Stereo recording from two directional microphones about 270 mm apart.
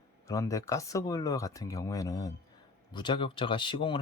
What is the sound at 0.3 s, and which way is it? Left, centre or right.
Speech, centre.